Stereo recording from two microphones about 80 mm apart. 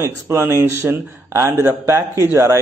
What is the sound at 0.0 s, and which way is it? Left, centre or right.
Speech, right.